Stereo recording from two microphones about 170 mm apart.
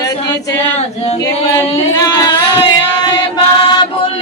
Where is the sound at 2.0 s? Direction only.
25° left (ahead or behind).